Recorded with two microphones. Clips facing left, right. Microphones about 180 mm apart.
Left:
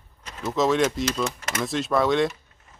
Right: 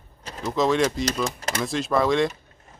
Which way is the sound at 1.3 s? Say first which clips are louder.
Right 1 dB; 30° right (ahead or behind).